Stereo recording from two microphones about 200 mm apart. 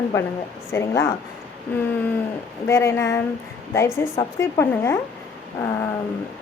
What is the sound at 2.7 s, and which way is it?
A woman's voice, 15° left (ahead or behind).